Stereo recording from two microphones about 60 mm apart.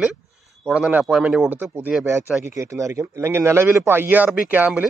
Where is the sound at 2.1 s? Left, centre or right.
Right.